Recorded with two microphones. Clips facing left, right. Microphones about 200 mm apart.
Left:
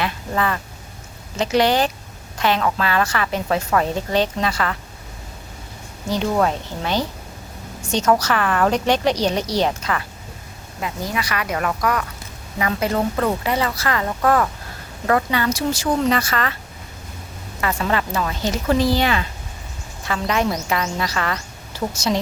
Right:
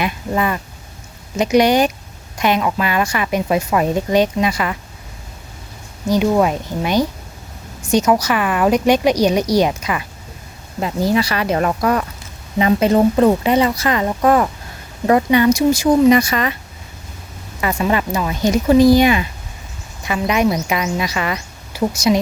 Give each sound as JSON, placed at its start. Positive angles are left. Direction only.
{"t": 0.0, "sound": "a woman's voice", "side_deg": -15}
{"t": 6.1, "sound": "a woman's voice", "side_deg": -10}
{"t": 10.8, "sound": "a woman's voice", "side_deg": -35}
{"t": 17.6, "sound": "a woman's voice", "side_deg": -15}